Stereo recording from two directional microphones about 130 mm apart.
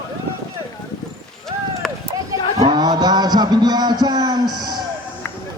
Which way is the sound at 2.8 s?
30° right (ahead or behind).